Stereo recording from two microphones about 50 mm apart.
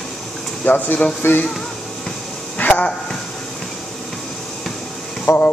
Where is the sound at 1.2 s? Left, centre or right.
Left.